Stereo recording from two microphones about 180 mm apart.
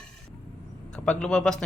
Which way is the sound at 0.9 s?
5° left (ahead or behind).